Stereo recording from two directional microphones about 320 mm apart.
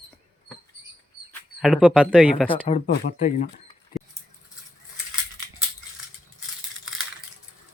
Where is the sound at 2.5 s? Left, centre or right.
Centre.